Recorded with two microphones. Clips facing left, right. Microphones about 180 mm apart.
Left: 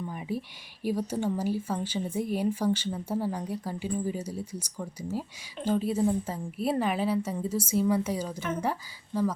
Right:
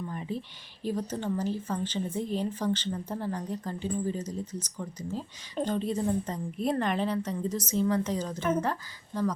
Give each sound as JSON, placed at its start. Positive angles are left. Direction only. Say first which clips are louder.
{"t": 0.0, "sound": "speech", "louder": "left 1 dB", "side_deg": 10}